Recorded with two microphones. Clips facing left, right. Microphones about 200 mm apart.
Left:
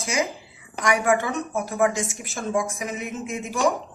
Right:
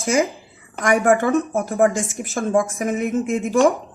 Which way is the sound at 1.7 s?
50° right (ahead or behind).